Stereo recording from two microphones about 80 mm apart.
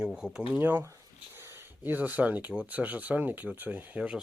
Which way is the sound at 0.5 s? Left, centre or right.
Right.